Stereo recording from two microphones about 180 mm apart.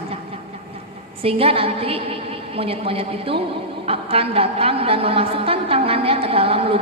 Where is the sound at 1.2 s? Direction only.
30° right (ahead or behind).